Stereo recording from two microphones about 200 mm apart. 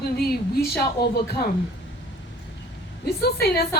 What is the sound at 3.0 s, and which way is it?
Speech, 50° left (ahead or behind).